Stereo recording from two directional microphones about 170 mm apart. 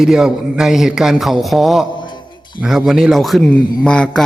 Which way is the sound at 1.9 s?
25° left (ahead or behind).